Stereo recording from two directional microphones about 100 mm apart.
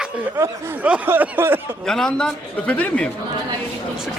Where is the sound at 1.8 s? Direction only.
5° left (ahead or behind).